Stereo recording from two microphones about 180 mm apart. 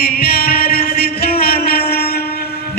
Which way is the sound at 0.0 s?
55° left (ahead or behind).